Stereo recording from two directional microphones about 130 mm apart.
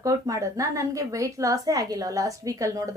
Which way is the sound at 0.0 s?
25° right (ahead or behind).